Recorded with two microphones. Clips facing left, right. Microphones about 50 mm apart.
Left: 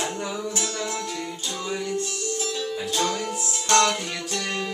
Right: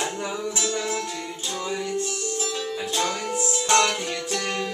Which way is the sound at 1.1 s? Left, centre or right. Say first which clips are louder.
Even; centre.